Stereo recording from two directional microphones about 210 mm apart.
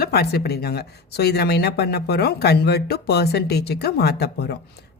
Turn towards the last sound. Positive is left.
turn(degrees=50)  # may be behind; listen again after turning